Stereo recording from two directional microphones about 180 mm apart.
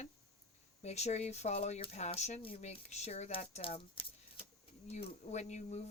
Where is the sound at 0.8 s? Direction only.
35° left (ahead or behind).